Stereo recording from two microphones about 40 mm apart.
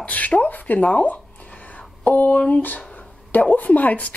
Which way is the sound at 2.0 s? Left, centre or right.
Left.